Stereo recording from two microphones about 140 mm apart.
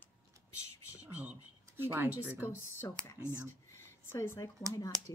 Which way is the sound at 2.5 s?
15° left (ahead or behind).